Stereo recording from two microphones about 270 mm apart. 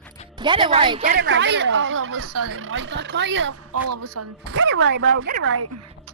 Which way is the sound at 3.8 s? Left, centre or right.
Right.